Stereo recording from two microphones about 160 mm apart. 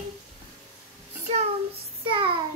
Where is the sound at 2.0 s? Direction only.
35° right (ahead or behind).